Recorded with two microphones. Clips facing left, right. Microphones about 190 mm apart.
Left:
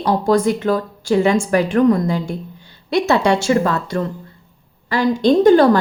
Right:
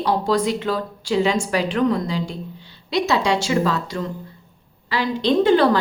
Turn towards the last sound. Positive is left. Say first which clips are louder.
# left 5 dB
turn(degrees=45)  # may be behind; listen again after turning